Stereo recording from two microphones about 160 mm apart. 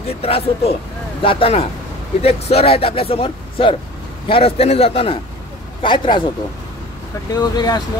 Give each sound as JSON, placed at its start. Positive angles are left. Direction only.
{"t": 0.2, "sound": "speech", "side_deg": 35}
{"t": 7.3, "sound": "speech", "side_deg": 25}